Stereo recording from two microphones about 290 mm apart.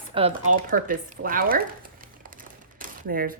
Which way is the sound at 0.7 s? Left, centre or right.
Right.